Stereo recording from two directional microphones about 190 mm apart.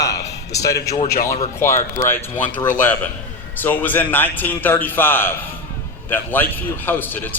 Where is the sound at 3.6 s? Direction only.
10° left (ahead or behind).